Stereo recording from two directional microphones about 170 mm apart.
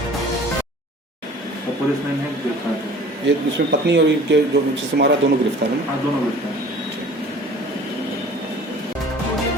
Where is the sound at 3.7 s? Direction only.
90° right.